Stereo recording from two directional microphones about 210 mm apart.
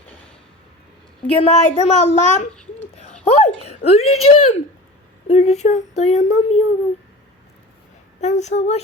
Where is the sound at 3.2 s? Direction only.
30° left (ahead or behind).